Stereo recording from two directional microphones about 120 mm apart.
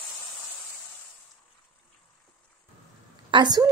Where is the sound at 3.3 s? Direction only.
35° right (ahead or behind).